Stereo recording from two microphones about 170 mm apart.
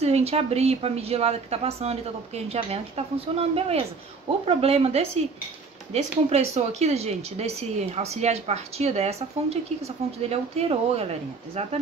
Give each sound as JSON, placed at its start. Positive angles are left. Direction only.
{"t": 0.0, "sound": "speech", "side_deg": -40}